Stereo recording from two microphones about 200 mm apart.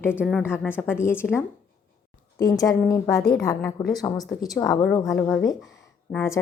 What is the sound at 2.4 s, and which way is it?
A woman's voice, 20° left (ahead or behind).